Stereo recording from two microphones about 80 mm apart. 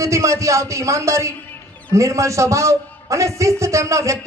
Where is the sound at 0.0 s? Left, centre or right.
Right.